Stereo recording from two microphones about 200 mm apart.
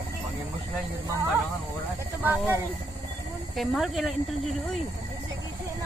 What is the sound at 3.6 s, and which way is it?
Speech, centre (ahead or behind).